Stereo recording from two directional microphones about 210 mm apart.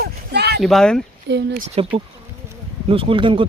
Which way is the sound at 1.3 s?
55° right (ahead or behind).